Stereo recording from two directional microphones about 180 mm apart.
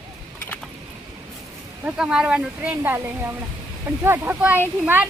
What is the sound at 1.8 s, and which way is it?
Speech, 5° right (ahead or behind).